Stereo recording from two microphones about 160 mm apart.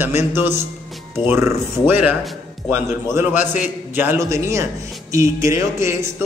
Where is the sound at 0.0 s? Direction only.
15° right (ahead or behind).